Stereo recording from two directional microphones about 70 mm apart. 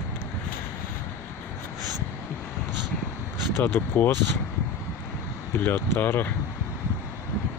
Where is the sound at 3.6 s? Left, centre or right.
Left.